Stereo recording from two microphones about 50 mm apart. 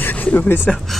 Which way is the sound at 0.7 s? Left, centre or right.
Centre.